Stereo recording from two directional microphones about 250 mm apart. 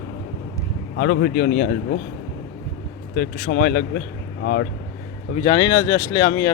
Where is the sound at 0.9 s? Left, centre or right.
Left.